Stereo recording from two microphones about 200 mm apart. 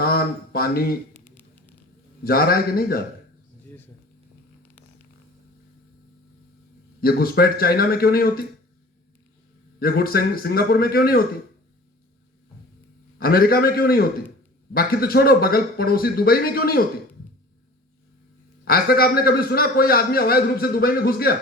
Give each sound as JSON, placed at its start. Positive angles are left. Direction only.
{"t": 0.0, "sound": "speech", "side_deg": 50}
{"t": 1.1, "sound": "music", "side_deg": 10}
{"t": 2.2, "sound": "a man's voice", "side_deg": 50}
{"t": 7.0, "sound": "a man's voice", "side_deg": 50}
{"t": 9.8, "sound": "a man's voice", "side_deg": 50}
{"t": 13.1, "sound": "a man's voice", "side_deg": 50}
{"t": 18.6, "sound": "a man's voice", "side_deg": 50}